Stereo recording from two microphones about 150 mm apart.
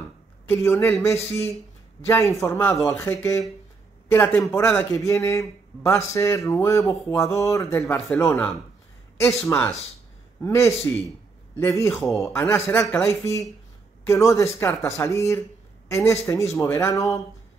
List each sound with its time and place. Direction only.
0.5 s a man's voice: 15° left (ahead or behind)
2.0 s a man's voice: 20° left (ahead or behind)
9.4 s a man's voice: 20° left (ahead or behind)